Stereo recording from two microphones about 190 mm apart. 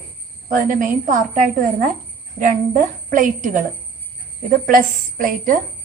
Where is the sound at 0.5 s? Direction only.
45° right (ahead or behind).